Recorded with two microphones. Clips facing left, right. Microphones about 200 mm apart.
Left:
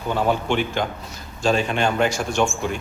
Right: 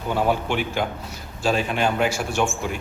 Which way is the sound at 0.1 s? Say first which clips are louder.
Left 1 dB; 10° right (ahead or behind).